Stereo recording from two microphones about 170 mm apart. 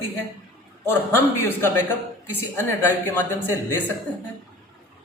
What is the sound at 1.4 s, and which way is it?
Speech, 15° left (ahead or behind).